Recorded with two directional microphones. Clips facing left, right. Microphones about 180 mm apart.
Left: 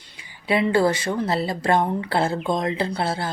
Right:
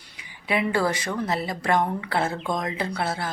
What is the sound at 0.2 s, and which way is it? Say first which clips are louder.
Speech: left 4 dB; 30° left (ahead or behind).